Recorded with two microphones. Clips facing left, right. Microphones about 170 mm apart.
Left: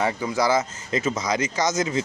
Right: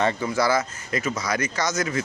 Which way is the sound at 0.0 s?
10° left (ahead or behind).